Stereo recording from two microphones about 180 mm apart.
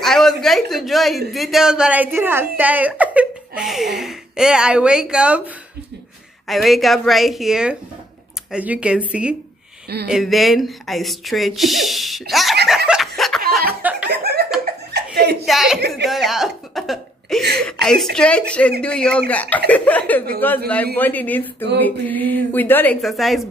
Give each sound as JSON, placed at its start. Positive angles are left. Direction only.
{"t": 0.0, "sound": "a sound", "side_deg": 0}
{"t": 1.3, "sound": "speech", "side_deg": 0}
{"t": 12.6, "sound": "snicker", "side_deg": -5}
{"t": 14.0, "sound": "laughter", "side_deg": -60}
{"t": 15.4, "sound": "a woman's voice", "side_deg": 0}
{"t": 16.1, "sound": "cough", "side_deg": 0}
{"t": 17.6, "sound": "speech", "side_deg": 5}
{"t": 23.0, "sound": "speech", "side_deg": 0}